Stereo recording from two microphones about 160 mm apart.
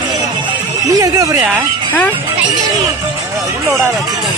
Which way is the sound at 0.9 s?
20° right (ahead or behind).